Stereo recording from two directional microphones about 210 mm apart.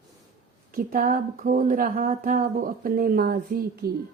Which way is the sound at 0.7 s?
40° right (ahead or behind).